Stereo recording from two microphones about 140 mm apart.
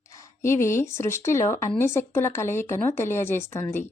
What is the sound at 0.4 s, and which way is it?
Speech, 20° left (ahead or behind).